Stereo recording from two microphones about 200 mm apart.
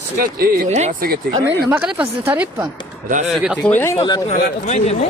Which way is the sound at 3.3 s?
Centre (ahead or behind).